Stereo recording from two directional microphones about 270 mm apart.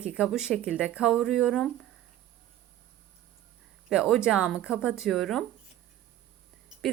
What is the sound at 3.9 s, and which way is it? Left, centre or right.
A woman's voice, centre.